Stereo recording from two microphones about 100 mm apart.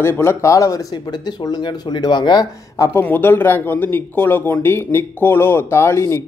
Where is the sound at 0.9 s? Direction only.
45° left (ahead or behind).